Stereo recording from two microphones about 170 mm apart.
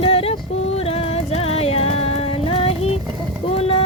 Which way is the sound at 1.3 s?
35° left (ahead or behind).